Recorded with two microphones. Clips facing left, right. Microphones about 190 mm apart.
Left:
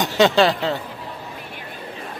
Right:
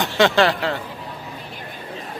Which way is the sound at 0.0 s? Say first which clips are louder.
Left 1 dB; 15° left (ahead or behind).